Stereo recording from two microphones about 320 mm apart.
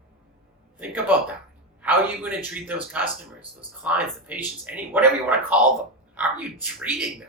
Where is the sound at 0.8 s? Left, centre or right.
Centre.